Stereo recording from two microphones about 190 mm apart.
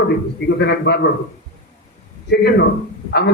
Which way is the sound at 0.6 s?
60° left (ahead or behind).